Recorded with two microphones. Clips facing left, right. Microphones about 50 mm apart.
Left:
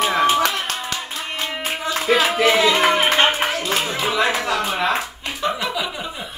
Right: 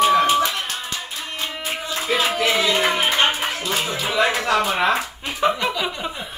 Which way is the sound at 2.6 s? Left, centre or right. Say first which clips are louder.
Left 3 dB; left.